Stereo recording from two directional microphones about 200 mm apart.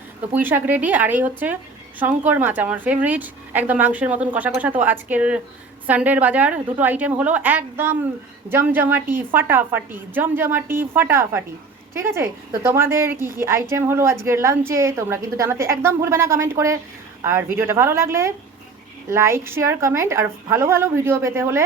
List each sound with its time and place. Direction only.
0.3 s a woman's voice: 10° right (ahead or behind)
13.1 s a woman's voice: 45° right (ahead or behind)
13.4 s a woman's voice: 15° right (ahead or behind)